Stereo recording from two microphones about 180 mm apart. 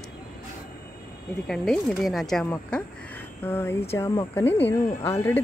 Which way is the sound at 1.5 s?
Centre (ahead or behind).